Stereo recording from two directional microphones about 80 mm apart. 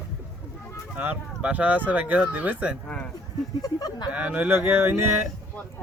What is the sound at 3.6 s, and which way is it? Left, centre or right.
Speech, left.